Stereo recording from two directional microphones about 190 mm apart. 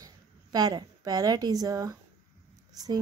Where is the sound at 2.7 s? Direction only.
20° right (ahead or behind).